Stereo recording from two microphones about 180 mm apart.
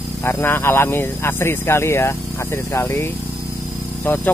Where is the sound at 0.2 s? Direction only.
10° left (ahead or behind).